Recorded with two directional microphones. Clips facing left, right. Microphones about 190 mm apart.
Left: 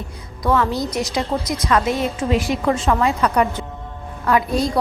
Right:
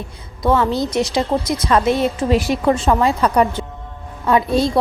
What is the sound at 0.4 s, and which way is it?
A woman's voice, 25° right (ahead or behind).